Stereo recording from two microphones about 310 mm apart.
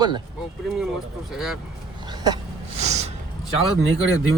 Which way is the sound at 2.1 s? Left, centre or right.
Centre.